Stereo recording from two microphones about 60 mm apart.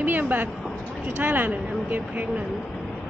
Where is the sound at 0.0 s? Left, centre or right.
Right.